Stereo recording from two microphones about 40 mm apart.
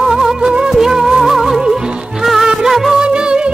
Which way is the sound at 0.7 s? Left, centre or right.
Centre.